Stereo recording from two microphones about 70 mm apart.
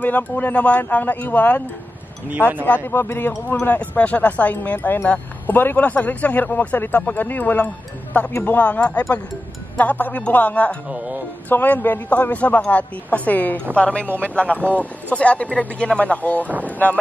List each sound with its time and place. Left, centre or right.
0.0 s speech: left
2.6 s a man's voice: left
8.3 s a man's voice: left
8.5 s speech: centre